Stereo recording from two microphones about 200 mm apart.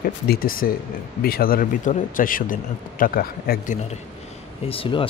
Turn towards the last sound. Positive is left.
turn(degrees=25)  # may be behind; listen again after turning